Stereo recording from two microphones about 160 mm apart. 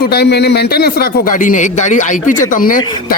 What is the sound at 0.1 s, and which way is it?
A man's voice, 90° left.